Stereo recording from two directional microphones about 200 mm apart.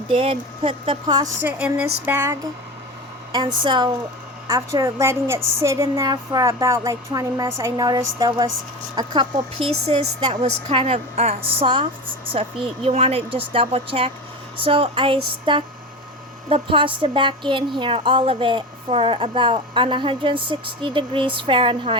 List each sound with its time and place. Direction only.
0.1 s a woman's voice: 25° right (ahead or behind)
3.3 s a woman's voice: 25° right (ahead or behind)